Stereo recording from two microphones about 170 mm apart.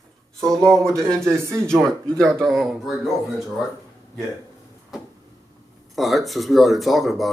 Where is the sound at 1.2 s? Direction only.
15° right (ahead or behind).